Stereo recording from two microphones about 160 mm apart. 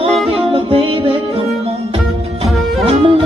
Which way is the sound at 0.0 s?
35° right (ahead or behind).